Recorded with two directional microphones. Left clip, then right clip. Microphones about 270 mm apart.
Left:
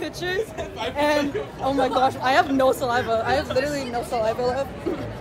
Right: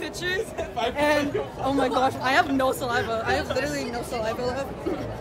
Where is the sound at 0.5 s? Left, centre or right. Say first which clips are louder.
Right 2 dB; right.